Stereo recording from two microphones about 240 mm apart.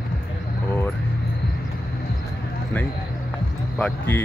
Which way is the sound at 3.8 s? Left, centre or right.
Centre.